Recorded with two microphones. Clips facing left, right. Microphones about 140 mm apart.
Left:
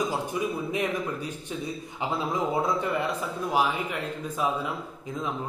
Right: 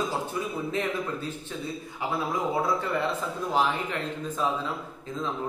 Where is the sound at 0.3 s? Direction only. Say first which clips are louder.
Left 2 dB; 15° left (ahead or behind).